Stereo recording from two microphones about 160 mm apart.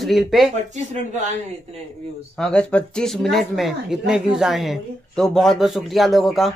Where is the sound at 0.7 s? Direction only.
45° right (ahead or behind).